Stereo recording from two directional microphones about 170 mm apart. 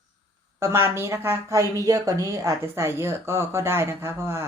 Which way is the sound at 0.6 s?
15° right (ahead or behind).